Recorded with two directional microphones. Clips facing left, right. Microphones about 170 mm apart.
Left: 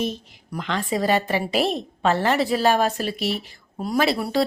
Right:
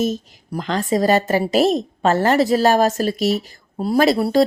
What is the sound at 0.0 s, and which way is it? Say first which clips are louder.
A woman's voice: right 6 dB; 40° right (ahead or behind).